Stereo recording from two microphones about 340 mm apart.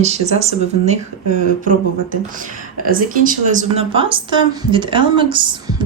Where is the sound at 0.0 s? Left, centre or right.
Centre.